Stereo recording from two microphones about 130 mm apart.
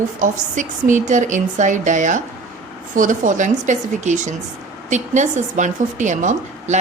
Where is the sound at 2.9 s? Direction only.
85° right; by 6.8 s 70° right (ahead or behind).